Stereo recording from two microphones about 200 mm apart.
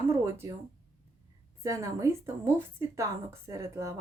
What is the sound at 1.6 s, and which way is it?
A woman's voice, 15° right (ahead or behind).